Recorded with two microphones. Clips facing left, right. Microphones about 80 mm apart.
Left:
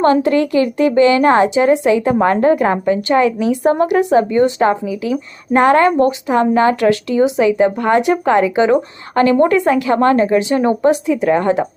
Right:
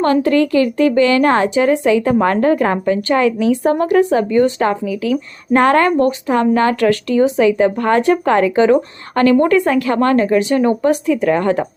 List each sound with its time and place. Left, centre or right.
0.0 s a woman's voice: left